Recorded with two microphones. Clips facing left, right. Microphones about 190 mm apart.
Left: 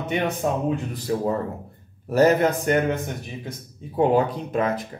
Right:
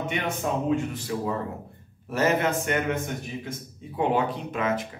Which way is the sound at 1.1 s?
35° left (ahead or behind).